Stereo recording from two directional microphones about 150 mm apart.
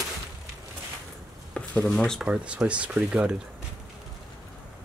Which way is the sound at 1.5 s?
5° left (ahead or behind).